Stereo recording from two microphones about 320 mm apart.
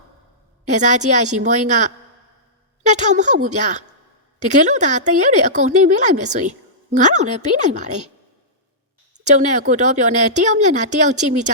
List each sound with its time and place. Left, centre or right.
0.7 s speech: right
9.1 s speech: right